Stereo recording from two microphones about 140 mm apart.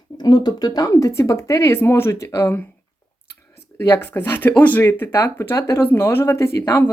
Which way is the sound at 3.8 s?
20° left (ahead or behind).